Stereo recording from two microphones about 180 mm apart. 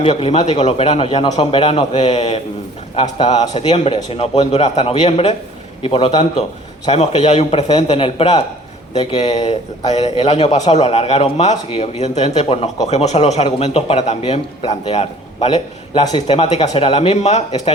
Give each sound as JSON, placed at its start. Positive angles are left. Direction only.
{"t": 0.0, "sound": "a man's voice", "side_deg": 35}